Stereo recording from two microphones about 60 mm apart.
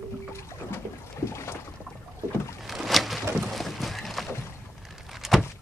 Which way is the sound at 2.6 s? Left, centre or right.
Centre.